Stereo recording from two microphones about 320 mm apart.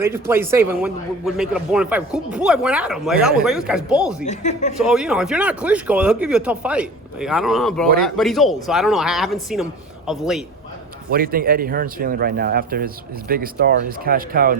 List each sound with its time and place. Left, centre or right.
0.0 s a man's voice: centre
4.2 s speech: left
4.9 s a man's voice: centre
11.1 s speech: right